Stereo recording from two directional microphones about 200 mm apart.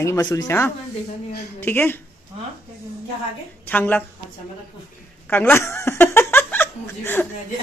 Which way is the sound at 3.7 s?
10° left (ahead or behind).